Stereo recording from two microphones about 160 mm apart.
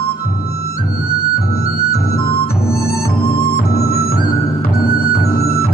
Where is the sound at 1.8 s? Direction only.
75° left (ahead or behind).